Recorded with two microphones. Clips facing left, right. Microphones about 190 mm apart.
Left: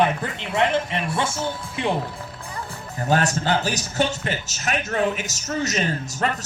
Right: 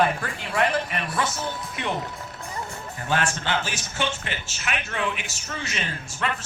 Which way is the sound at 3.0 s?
40° left (ahead or behind).